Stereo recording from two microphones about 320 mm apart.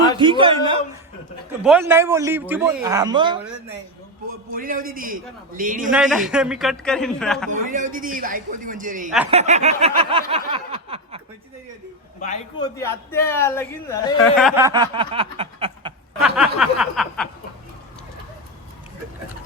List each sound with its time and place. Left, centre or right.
0.2 s a man's voice: centre
4.3 s snicker: right
5.9 s a man's voice: centre
7.5 s snicker: right
12.2 s a man's voice: centre
14.3 s a man's voice: centre
16.2 s snicker: centre